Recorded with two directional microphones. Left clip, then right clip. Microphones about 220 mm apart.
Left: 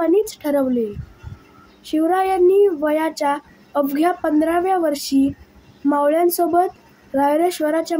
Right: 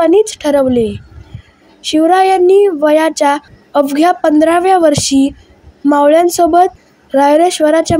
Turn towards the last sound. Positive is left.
turn(degrees=-35)  # may be behind; listen again after turning